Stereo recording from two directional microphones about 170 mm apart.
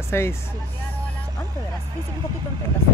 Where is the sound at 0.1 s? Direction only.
15° left (ahead or behind).